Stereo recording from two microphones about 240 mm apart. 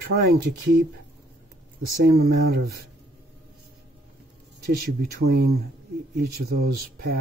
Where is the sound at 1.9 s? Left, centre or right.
Right.